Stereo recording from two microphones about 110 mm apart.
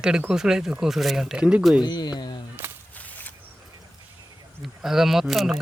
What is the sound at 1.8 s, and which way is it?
Speech, 40° left (ahead or behind).